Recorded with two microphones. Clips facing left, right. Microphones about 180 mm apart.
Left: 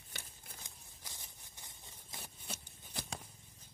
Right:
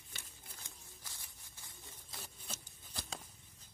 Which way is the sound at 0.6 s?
15° left (ahead or behind).